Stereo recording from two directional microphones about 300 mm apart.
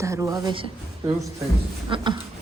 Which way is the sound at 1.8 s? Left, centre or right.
Centre.